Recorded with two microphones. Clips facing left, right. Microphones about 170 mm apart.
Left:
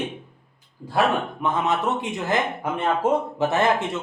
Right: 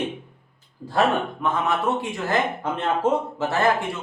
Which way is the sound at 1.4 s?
20° left (ahead or behind).